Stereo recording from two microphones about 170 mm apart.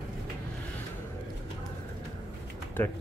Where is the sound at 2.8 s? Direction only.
10° left (ahead or behind).